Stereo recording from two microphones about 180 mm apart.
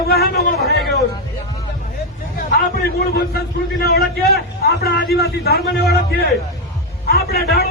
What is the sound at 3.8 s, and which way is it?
A man's voice, 60° left (ahead or behind).